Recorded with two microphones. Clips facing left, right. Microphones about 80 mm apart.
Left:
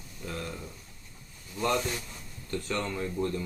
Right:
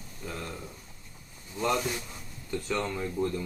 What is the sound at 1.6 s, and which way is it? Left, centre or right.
Speech, centre.